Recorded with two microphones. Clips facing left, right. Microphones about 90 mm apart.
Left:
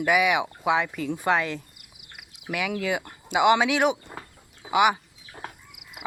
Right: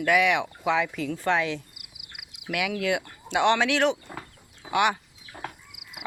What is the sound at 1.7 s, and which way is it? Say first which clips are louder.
Cricket: right 2 dB; 90° right.